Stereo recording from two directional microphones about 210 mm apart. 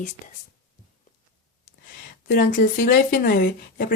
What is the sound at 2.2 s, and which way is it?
Speech, 40° left (ahead or behind).